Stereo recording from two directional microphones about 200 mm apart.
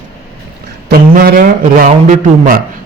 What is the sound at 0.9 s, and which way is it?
A man's voice, 50° right (ahead or behind).